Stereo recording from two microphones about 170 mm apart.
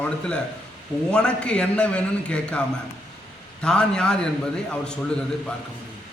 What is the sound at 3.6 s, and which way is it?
Speech, 5° left (ahead or behind).